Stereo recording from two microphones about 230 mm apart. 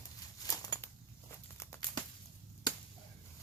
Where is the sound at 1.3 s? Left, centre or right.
Centre.